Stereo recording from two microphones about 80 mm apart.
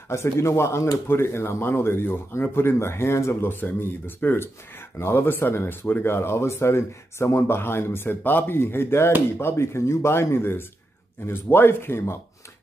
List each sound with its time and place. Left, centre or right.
0.1 s speech: left